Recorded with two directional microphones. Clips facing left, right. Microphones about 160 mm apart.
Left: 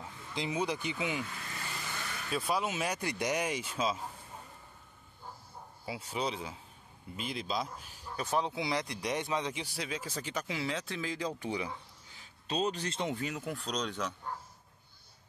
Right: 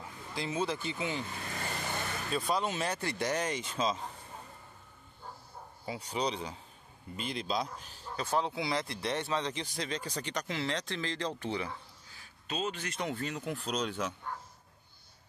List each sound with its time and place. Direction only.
0.3 s speech: 15° left (ahead or behind)
1.2 s vehicle: 35° right (ahead or behind)
2.3 s speech: 5° left (ahead or behind)
5.9 s speech: 5° left (ahead or behind)
12.4 s speech: 35° left (ahead or behind)
13.1 s speech: 10° left (ahead or behind); by 14.1 s 10° right (ahead or behind)